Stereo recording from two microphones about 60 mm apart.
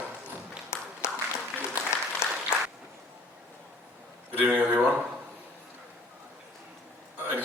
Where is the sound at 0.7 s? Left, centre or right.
Left.